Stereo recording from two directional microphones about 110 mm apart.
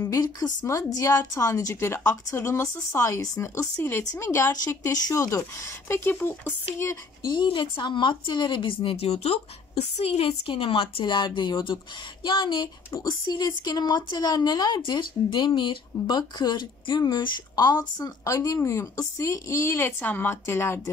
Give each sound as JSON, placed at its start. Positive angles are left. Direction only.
{"t": 0.2, "sound": "a woman's voice", "side_deg": 35}
{"t": 7.2, "sound": "a woman's voice", "side_deg": 45}